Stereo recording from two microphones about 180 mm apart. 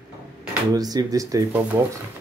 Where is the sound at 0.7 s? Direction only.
20° right (ahead or behind).